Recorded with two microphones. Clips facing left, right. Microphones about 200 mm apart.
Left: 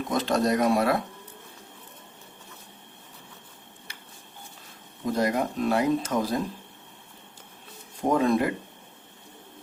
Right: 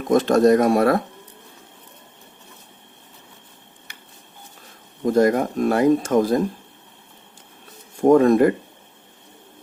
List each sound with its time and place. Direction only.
0.1 s speech: 50° right (ahead or behind)
5.0 s speech: 50° right (ahead or behind)
8.0 s speech: 50° right (ahead or behind)